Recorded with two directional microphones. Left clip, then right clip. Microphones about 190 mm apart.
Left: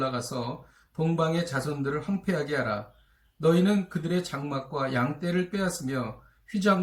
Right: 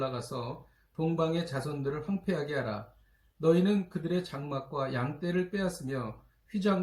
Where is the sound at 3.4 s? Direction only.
Centre (ahead or behind).